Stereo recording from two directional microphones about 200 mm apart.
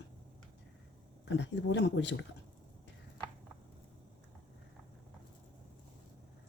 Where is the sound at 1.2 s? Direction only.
60° left (ahead or behind).